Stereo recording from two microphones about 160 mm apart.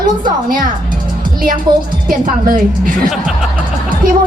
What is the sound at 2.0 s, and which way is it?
A woman's voice, 60° right (ahead or behind).